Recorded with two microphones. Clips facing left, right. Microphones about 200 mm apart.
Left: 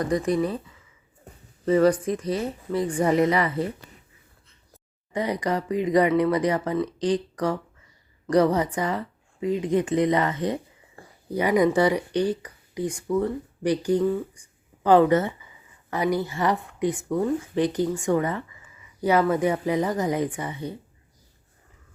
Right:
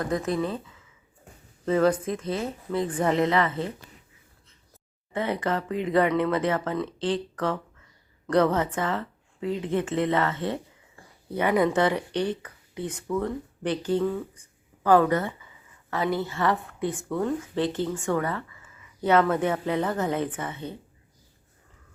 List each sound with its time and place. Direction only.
0.0 s speech: 5° right (ahead or behind)
1.6 s speech: 5° left (ahead or behind)
3.0 s speech: 10° left (ahead or behind)
5.1 s speech: 15° left (ahead or behind)